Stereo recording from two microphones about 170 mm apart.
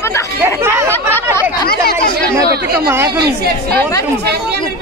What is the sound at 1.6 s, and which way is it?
Speech, 65° left (ahead or behind).